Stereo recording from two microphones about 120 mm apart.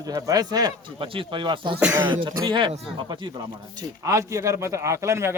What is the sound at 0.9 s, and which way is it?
Speech, 45° right (ahead or behind).